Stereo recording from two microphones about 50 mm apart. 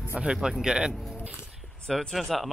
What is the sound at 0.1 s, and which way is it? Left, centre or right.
Speech, centre.